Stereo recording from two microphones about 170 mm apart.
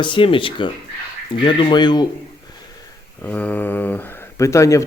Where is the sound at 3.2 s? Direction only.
10° left (ahead or behind).